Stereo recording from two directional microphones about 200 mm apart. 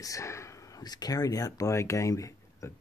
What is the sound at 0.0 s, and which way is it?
Speech, 15° left (ahead or behind).